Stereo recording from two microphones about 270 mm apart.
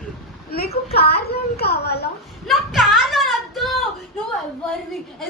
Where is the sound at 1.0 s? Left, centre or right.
Left.